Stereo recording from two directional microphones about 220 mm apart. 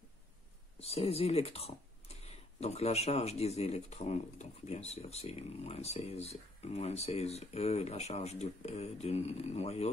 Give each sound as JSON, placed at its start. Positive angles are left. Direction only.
{"t": 0.7, "sound": "speech", "side_deg": 25}